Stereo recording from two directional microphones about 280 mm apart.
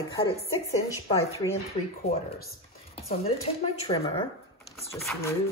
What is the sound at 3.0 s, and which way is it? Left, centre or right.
Speech, left.